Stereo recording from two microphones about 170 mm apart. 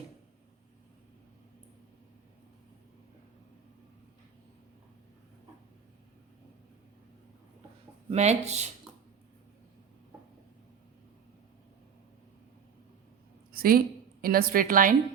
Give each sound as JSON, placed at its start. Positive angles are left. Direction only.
{"t": 8.1, "sound": "speech", "side_deg": -40}
{"t": 13.5, "sound": "a woman's voice", "side_deg": -60}